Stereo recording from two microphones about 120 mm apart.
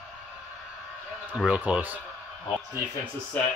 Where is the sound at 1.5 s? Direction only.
10° right (ahead or behind).